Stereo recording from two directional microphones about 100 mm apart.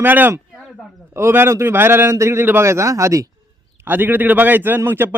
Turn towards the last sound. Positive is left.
turn(degrees=-20)  # may be behind; listen again after turning